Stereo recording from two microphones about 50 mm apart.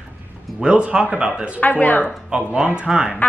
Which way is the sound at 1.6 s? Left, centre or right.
Left.